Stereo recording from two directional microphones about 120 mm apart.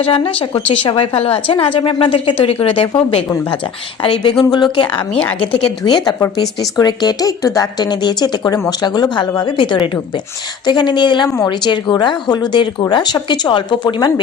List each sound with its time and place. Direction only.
0.0 s a woman's voice: 50° left (ahead or behind)
4.0 s speech: 40° left (ahead or behind)